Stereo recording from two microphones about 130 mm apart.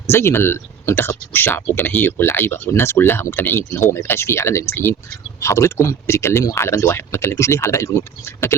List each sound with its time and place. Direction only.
0.1 s speech: 20° left (ahead or behind)